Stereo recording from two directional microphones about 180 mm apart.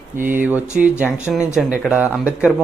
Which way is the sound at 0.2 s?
10° right (ahead or behind).